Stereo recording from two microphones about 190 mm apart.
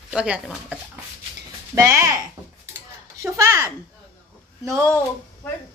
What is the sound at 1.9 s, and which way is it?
Speech, 15° right (ahead or behind).